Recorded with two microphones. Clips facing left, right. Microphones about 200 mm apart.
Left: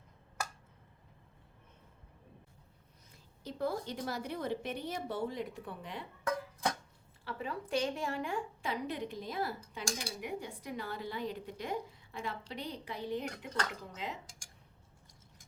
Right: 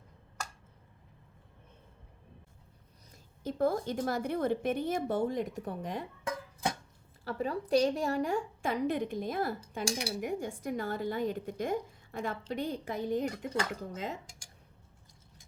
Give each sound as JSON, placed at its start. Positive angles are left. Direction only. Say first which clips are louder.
{"t": 3.1, "sound": "a woman's voice", "louder": "right 7 dB", "side_deg": -50}
{"t": 6.2, "sound": "music", "louder": "left 2 dB", "side_deg": -20}
{"t": 7.3, "sound": "a woman's voice", "louder": "right 7 dB", "side_deg": -40}
{"t": 9.7, "sound": "speech", "louder": "right 6 dB", "side_deg": -65}
{"t": 10.2, "sound": "a woman's voice", "louder": "right 6 dB", "side_deg": -45}